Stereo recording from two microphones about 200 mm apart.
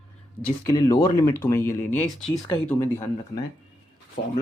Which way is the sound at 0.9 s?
10° left (ahead or behind).